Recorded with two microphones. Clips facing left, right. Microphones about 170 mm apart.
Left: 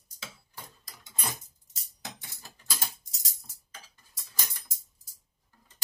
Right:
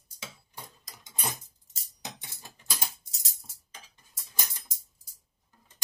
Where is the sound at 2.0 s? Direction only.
20° right (ahead or behind).